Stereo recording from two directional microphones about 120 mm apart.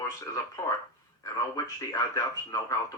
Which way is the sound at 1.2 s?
30° left (ahead or behind).